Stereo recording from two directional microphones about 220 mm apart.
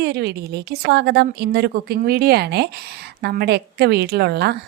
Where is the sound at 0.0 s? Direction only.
45° right (ahead or behind).